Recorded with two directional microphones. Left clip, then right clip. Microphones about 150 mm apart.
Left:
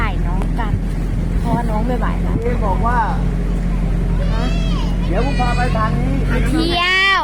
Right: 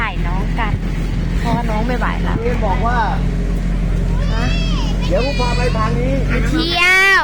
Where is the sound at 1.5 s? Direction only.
Centre (ahead or behind).